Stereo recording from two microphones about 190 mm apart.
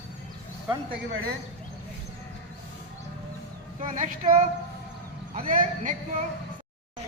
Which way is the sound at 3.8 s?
45° right (ahead or behind).